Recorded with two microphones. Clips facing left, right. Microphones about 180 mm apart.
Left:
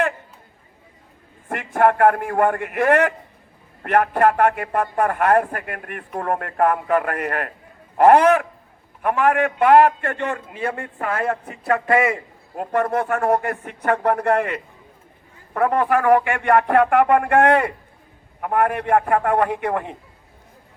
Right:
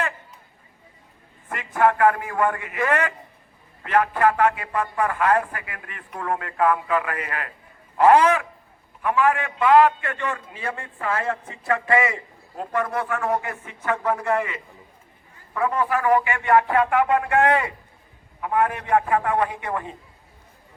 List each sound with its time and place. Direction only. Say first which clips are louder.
1.5 s speech: left 3 dB; 50° left (ahead or behind)